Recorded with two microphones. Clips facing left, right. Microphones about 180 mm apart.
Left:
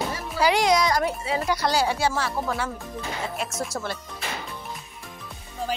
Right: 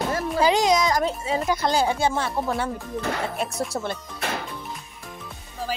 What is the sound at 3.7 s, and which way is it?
Speech, 20° right (ahead or behind).